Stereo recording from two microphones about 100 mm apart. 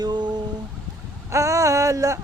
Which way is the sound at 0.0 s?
45° right (ahead or behind).